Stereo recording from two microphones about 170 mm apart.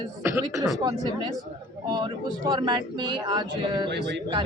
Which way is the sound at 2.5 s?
25° right (ahead or behind).